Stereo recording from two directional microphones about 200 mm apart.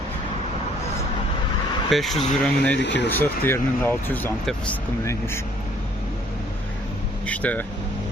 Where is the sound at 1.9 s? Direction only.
Centre (ahead or behind).